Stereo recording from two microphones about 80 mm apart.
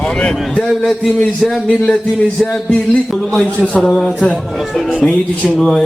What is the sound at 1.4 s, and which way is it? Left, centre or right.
A man's voice, centre.